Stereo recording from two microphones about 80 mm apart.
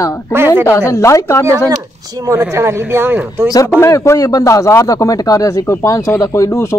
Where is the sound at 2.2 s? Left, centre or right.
Right.